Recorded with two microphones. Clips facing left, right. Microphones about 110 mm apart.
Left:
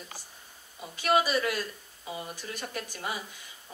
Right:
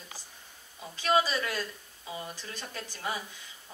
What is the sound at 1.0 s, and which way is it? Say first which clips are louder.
Speech: left 2 dB; 15° left (ahead or behind).